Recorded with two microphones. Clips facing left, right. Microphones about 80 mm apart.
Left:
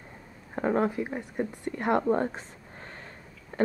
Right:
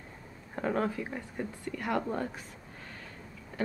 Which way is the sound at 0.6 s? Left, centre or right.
Left.